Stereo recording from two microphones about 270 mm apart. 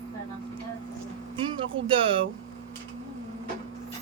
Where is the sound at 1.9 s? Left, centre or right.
Centre.